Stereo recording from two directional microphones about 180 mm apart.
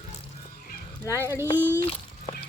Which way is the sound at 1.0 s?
15° left (ahead or behind).